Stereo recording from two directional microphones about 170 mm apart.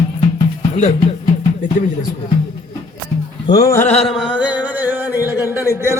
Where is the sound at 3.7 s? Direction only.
15° left (ahead or behind).